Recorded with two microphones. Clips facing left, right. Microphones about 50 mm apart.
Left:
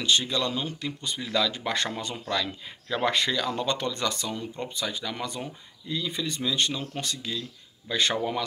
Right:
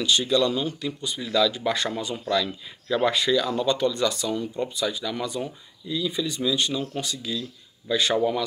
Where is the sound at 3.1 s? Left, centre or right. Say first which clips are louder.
Right 2 dB; left.